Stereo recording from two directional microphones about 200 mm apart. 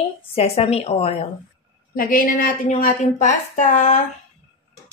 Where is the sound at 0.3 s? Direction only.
30° left (ahead or behind).